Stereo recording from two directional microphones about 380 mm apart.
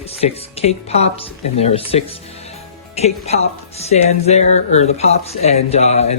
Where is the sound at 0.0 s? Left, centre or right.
Centre.